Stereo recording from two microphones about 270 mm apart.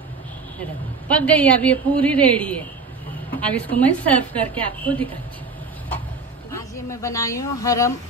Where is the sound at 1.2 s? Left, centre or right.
Centre.